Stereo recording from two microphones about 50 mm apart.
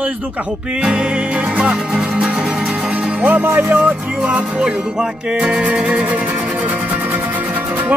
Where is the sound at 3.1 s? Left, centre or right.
Right.